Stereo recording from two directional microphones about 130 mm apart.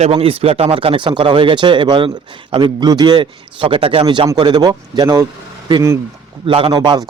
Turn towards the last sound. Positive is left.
turn(degrees=-30)  # may be behind; listen again after turning